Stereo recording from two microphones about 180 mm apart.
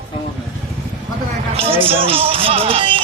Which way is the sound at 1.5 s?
30° right (ahead or behind).